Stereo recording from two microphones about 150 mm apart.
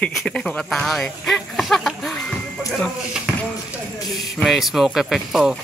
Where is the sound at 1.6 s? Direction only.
Centre (ahead or behind).